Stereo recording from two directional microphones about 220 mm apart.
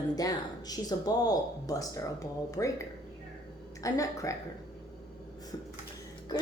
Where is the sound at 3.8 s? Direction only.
15° left (ahead or behind).